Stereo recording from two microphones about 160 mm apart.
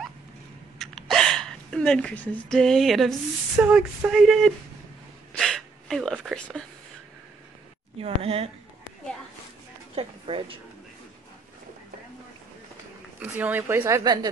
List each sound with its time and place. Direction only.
0.7 s speech: centre (ahead or behind)
5.3 s a sound: centre (ahead or behind)
8.0 s a woman's voice: 35° right (ahead or behind)
9.9 s a woman's voice: 35° right (ahead or behind)
13.2 s a woman's voice: 10° right (ahead or behind)